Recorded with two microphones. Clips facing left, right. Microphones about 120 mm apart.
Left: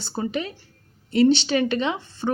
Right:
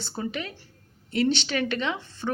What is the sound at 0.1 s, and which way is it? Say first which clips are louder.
A woman's voice: left 6 dB; 25° left (ahead or behind).